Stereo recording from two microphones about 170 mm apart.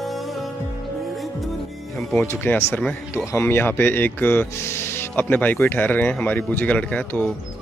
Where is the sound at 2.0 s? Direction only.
10° left (ahead or behind).